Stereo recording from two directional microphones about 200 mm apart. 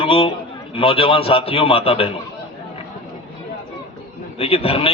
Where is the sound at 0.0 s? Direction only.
25° left (ahead or behind).